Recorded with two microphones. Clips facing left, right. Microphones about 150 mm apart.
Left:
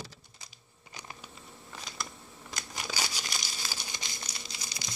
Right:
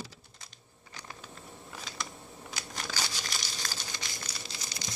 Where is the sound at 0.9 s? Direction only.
15° left (ahead or behind).